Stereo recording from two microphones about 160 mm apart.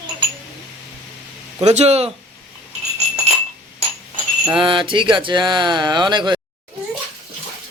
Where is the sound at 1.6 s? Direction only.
45° right (ahead or behind).